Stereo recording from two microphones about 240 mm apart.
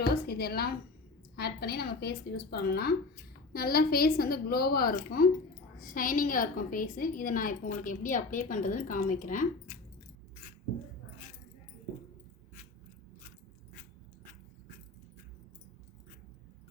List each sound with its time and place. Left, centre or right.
0.0 s a woman's voice: left